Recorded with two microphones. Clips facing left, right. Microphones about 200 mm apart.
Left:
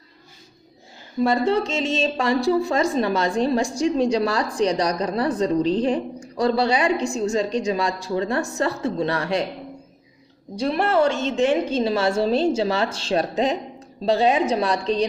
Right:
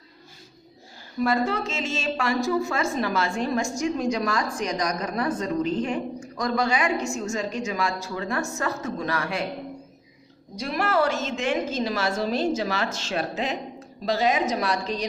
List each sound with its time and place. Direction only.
1.2 s a woman's voice: 30° left (ahead or behind)
10.5 s a woman's voice: 30° left (ahead or behind)